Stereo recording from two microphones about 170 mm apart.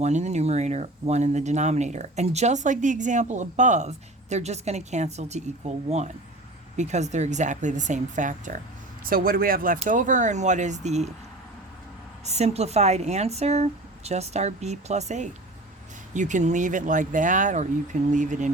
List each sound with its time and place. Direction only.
0.0 s speech: 40° right (ahead or behind)
12.2 s speech: 40° right (ahead or behind)